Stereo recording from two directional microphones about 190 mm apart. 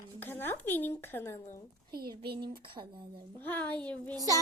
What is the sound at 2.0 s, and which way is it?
A child's voice, 25° right (ahead or behind).